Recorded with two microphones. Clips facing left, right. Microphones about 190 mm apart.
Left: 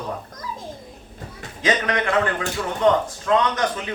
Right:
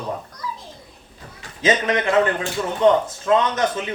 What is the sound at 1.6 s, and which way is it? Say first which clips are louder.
A man's voice: right 2 dB; 25° right (ahead or behind).